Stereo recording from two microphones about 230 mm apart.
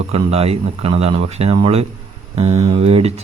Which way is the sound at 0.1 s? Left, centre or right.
Right.